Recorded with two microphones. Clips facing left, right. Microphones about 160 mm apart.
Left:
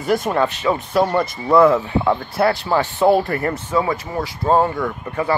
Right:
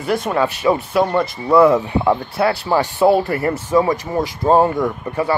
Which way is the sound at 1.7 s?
10° right (ahead or behind).